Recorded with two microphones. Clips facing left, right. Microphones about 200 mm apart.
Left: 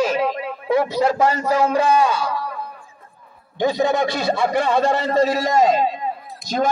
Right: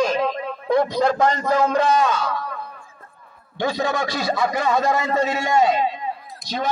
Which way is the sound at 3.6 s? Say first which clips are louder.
Left 4 dB; 20° left (ahead or behind).